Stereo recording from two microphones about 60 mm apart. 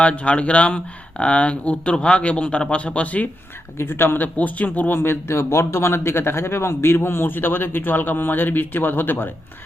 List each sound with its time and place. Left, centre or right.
0.0 s speech: left
3.8 s a man's voice: left
4.9 s a man's voice: left